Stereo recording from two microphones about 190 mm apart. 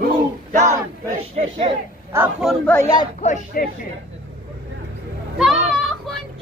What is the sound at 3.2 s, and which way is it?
Speech, 40° left (ahead or behind).